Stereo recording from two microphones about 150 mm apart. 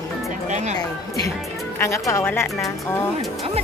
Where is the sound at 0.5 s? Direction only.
50° right (ahead or behind).